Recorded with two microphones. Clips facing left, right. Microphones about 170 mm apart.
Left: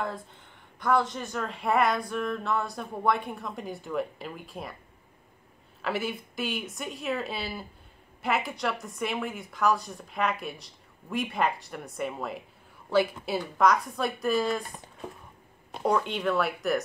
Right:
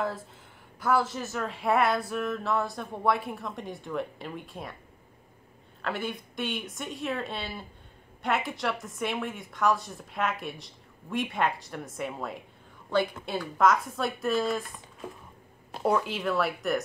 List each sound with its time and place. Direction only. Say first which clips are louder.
0.7 s speech: even; 5° right (ahead or behind)
5.8 s speech: left 2 dB; 5° left (ahead or behind)
15.7 s speech: even; 5° right (ahead or behind)